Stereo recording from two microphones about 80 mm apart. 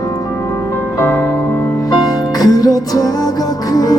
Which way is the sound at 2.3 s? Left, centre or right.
Left.